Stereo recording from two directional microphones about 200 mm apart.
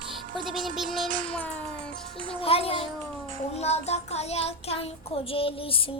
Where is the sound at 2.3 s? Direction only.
30° left (ahead or behind).